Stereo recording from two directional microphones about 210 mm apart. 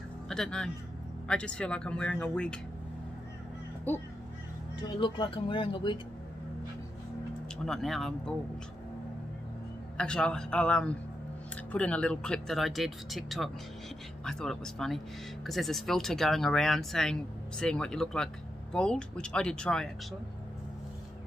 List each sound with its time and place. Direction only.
0.3 s speech: 5° left (ahead or behind)
3.9 s speech: 10° left (ahead or behind)
5.0 s speech: 20° left (ahead or behind)
7.5 s speech: centre (ahead or behind)
9.9 s speech: 5° left (ahead or behind)